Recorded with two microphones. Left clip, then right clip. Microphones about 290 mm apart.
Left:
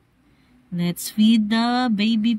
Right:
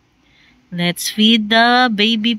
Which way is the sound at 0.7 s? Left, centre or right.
Centre.